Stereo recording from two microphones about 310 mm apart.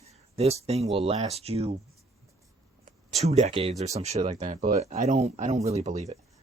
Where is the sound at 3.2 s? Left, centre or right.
Right.